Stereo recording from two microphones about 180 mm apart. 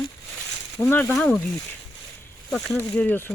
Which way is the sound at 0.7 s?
10° left (ahead or behind).